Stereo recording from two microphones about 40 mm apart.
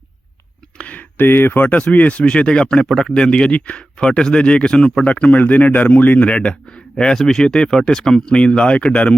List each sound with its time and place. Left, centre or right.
0.8 s a sound: left
1.1 s speech: left
1.6 s speech: left
5.0 s speech: left
6.1 s speech: left; by 7.4 s centre
7.4 s speech: centre